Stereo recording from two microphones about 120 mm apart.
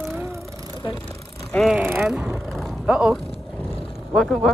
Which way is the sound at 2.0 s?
5° right (ahead or behind).